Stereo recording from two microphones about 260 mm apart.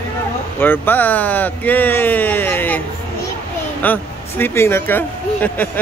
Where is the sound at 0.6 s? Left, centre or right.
Centre.